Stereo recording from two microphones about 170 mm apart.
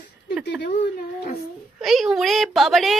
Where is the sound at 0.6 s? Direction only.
80° left.